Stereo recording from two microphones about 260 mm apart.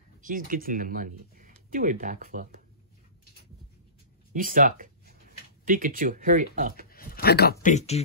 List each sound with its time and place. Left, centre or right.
0.2 s speech: right
4.3 s speech: right
6.9 s speech: left
7.6 s speech: left